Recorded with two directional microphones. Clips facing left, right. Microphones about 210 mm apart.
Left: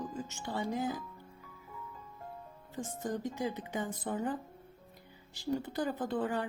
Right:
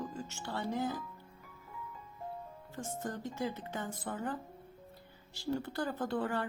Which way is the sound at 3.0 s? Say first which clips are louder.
Left 3 dB; 15° left (ahead or behind).